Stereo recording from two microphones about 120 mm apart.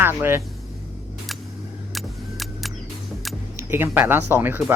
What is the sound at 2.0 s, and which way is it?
Vehicle, centre (ahead or behind).